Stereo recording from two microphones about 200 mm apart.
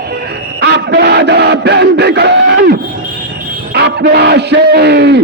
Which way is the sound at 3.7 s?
55° right (ahead or behind).